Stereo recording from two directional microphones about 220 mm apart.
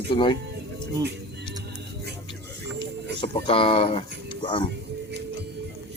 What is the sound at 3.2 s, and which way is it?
Speech, 25° left (ahead or behind).